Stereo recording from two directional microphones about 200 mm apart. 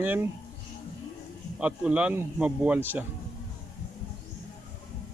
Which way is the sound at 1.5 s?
5° right (ahead or behind).